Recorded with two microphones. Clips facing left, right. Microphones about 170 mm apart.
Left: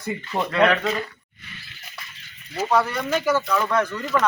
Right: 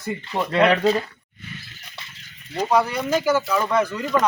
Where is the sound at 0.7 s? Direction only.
30° right (ahead or behind).